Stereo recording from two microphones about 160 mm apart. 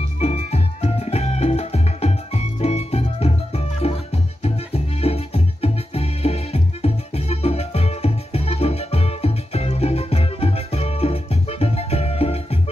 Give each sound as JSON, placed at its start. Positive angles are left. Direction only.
{"t": 0.2, "sound": "music", "side_deg": 40}